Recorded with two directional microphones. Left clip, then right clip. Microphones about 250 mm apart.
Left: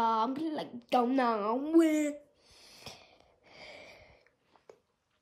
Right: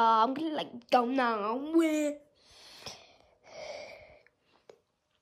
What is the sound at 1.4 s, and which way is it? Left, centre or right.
Speech, centre.